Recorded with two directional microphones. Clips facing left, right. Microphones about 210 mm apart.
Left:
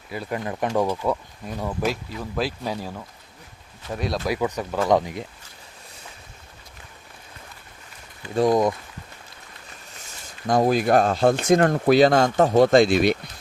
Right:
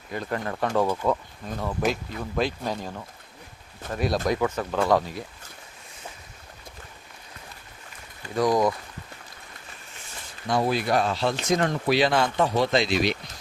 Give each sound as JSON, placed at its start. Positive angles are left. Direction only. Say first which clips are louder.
{"t": 0.1, "sound": "speech", "louder": "left 1 dB", "side_deg": 10}
{"t": 4.4, "sound": "speech", "louder": "even", "side_deg": 15}
{"t": 8.4, "sound": "speech", "louder": "left 3 dB", "side_deg": 25}
{"t": 10.4, "sound": "speech", "louder": "left 5 dB", "side_deg": 45}